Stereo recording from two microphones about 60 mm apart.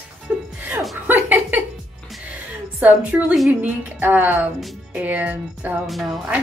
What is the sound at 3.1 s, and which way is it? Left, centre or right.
A woman's voice, right.